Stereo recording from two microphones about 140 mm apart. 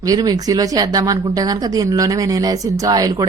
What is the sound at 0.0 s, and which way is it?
Speech, 25° right (ahead or behind).